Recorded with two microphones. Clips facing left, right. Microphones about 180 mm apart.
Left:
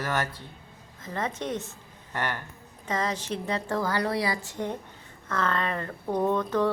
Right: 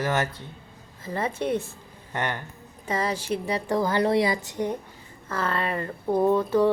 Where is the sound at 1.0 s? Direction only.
10° right (ahead or behind).